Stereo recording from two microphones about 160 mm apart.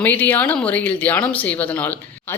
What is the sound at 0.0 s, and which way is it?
Speech, 10° left (ahead or behind).